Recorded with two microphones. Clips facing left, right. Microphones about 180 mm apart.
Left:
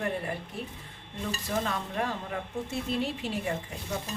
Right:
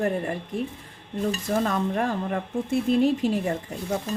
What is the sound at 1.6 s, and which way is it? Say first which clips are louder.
Speech: right 7 dB; 45° right (ahead or behind).